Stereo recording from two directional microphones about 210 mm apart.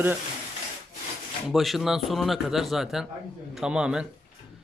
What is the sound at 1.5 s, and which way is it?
Speech, centre (ahead or behind).